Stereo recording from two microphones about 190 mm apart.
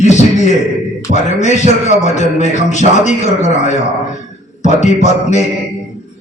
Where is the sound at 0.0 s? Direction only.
40° left (ahead or behind).